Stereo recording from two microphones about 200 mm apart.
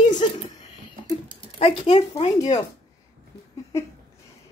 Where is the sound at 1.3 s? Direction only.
30° left (ahead or behind).